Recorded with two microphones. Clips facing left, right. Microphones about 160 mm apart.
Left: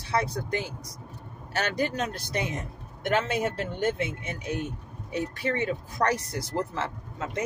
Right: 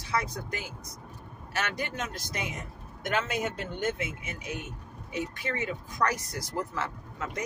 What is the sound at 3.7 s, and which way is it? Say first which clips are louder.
Speech: left 3 dB; 30° left (ahead or behind).